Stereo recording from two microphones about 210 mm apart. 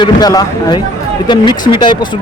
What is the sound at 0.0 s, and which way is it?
Speech, 20° left (ahead or behind).